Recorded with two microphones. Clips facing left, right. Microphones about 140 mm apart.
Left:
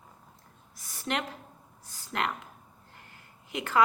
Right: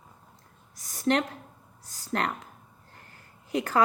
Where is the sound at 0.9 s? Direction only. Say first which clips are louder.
Right 8 dB; 40° right (ahead or behind).